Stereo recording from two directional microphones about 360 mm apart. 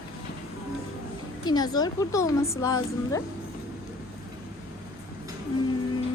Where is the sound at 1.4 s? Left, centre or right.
Centre.